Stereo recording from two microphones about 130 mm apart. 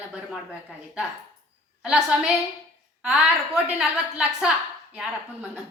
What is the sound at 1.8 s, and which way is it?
A woman's voice, 10° right (ahead or behind).